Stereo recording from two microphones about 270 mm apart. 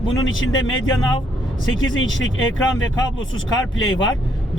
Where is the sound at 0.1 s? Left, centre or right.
Left.